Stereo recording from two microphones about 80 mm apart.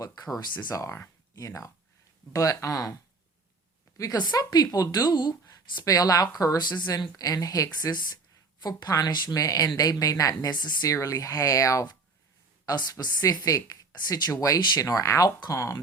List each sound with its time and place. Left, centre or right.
0.0 s speech: left
0.7 s speech: left
4.2 s speech: left
6.7 s speech: left
7.2 s speech: left
10.5 s speech: left
10.8 s speech: left
13.0 s speech: left